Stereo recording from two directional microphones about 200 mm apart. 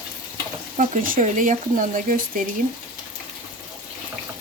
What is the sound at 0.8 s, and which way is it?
Speech, 40° right (ahead or behind).